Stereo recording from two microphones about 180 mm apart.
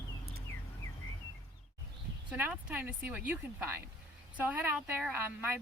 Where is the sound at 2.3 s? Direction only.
10° right (ahead or behind).